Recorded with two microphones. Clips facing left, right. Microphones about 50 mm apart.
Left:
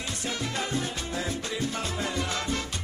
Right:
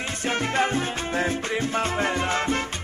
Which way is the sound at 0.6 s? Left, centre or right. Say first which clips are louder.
Right 7 dB; right.